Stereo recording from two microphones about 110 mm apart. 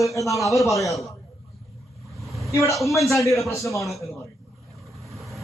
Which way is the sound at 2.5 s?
25° left (ahead or behind).